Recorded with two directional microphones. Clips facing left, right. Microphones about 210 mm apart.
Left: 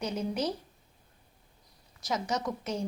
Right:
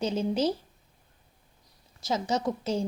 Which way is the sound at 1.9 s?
30° right (ahead or behind).